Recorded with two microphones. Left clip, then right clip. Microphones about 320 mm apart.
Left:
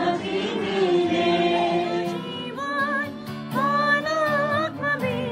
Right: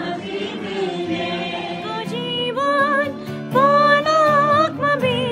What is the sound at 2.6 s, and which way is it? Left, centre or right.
Music, centre.